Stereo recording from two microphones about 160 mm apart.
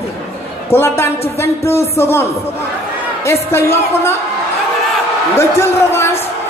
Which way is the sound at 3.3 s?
15° left (ahead or behind).